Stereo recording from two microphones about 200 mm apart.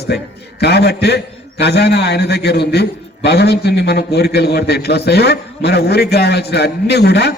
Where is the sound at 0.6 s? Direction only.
55° left (ahead or behind).